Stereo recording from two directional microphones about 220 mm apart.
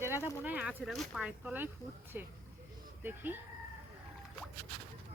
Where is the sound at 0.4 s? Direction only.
5° right (ahead or behind).